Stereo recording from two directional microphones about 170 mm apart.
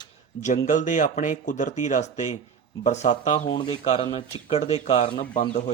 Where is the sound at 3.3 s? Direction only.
30° left (ahead or behind).